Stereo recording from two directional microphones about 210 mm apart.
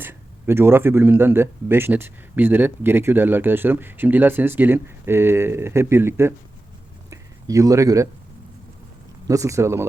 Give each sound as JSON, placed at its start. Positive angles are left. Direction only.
{"t": 0.0, "sound": "speech", "side_deg": -10}
{"t": 7.1, "sound": "a sound", "side_deg": -15}
{"t": 9.2, "sound": "speech", "side_deg": -15}